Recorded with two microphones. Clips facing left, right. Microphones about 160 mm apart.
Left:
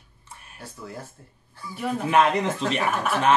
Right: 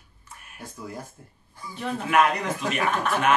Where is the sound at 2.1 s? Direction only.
25° left (ahead or behind).